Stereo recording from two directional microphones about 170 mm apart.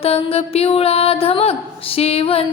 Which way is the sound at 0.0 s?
35° left (ahead or behind).